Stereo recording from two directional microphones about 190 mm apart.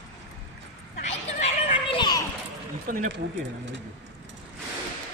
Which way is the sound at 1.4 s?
30° left (ahead or behind).